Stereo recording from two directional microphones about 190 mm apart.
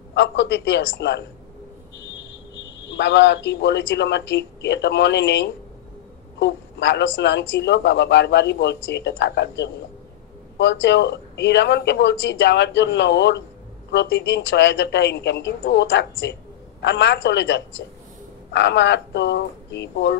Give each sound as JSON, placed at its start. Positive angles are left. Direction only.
{"t": 0.1, "sound": "speech", "side_deg": 65}
{"t": 2.9, "sound": "speech", "side_deg": 70}